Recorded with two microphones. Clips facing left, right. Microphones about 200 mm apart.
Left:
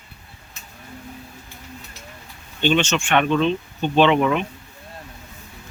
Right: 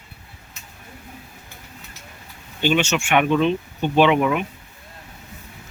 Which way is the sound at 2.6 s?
10° right (ahead or behind).